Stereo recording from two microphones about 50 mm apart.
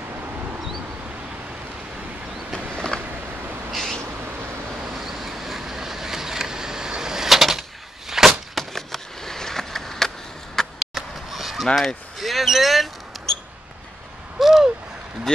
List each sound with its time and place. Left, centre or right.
2.5 s a sound: centre
3.7 s owl: centre
4.9 s vehicle: centre
8.1 s a sound: centre
11.6 s speech: centre
14.4 s owl: centre
15.3 s speech: centre